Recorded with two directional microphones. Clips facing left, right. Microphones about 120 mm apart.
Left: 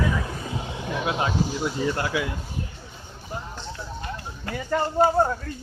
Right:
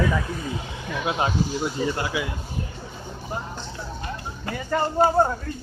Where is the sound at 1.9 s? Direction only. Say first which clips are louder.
Left 1 dB; 10° right (ahead or behind).